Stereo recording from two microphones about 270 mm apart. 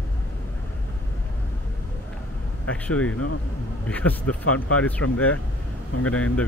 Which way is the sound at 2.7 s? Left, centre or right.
Centre.